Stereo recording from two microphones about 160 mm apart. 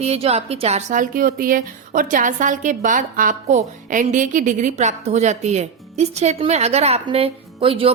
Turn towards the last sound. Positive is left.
turn(degrees=-35)  # may be behind; listen again after turning